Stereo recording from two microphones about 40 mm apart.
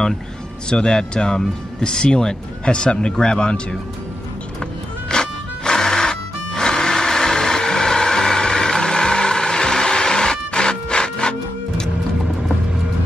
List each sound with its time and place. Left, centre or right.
0.7 s speech: centre
5.1 s music: centre